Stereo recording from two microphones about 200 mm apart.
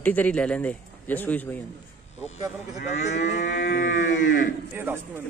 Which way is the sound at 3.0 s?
35° left (ahead or behind).